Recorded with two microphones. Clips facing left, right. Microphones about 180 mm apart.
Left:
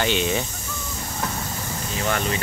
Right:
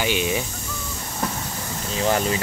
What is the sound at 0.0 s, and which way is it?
Speech, 10° right (ahead or behind).